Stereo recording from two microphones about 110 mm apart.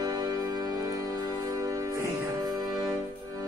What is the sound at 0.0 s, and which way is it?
Music, 35° right (ahead or behind).